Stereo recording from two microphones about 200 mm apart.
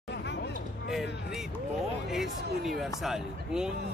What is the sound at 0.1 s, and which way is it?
Hubbub, 60° left (ahead or behind).